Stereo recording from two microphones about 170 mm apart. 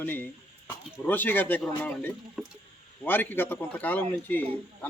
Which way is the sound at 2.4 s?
Centre (ahead or behind).